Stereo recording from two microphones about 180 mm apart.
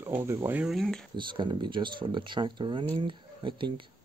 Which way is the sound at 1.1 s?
25° right (ahead or behind).